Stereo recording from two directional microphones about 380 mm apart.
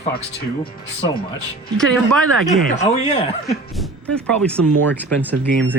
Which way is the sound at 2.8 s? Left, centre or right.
Centre.